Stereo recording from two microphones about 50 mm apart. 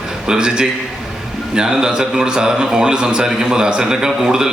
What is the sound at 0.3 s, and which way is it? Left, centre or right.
A man's voice, centre.